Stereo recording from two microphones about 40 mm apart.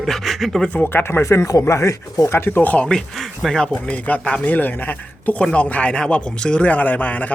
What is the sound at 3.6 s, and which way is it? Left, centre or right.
Speech, left.